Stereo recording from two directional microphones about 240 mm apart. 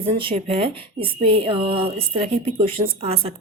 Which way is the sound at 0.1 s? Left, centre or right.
Right.